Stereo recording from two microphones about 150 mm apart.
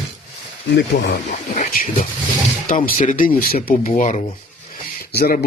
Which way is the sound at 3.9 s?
50° left (ahead or behind).